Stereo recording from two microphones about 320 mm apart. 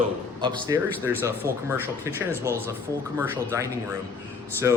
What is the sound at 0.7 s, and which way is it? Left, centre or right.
Speech, centre.